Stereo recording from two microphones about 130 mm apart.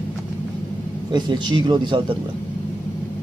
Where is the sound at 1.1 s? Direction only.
35° right (ahead or behind).